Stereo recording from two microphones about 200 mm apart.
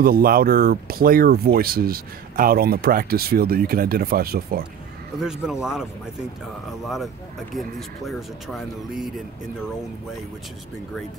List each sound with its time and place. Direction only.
0.0 s speech: 45° right (ahead or behind)
5.2 s speech: 5° right (ahead or behind)
7.5 s speech: centre (ahead or behind)